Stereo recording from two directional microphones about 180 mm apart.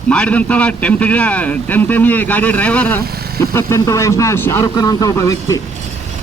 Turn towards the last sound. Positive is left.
turn(degrees=20)  # may be behind; listen again after turning